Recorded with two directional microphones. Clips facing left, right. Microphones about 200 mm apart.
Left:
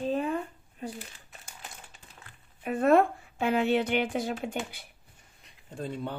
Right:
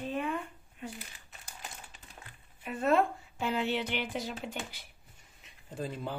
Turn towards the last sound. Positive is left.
turn(degrees=0)  # may be behind; listen again after turning